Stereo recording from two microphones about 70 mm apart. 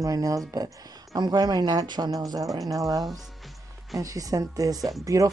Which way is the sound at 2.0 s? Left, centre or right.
Right.